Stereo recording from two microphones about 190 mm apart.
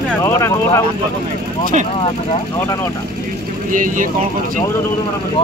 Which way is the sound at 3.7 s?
45° right (ahead or behind).